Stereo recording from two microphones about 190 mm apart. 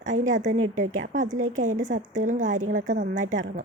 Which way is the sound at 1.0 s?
40° right (ahead or behind).